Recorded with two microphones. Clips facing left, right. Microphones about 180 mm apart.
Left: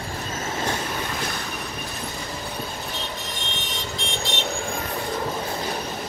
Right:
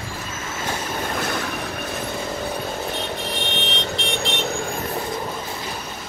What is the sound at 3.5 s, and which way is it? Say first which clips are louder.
Vehicle: right 6 dB; 65° right (ahead or behind).